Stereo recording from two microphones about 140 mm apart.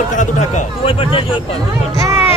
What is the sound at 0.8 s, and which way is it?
Speech, 40° left (ahead or behind).